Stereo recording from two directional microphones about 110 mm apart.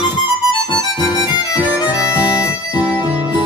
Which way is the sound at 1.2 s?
40° left (ahead or behind).